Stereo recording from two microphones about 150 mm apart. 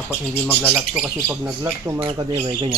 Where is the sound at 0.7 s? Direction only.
5° right (ahead or behind).